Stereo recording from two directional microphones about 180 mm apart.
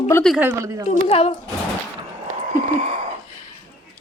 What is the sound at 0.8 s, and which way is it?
Speech, 35° left (ahead or behind).